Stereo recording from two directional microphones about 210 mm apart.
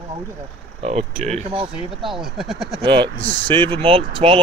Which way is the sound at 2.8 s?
25° right (ahead or behind).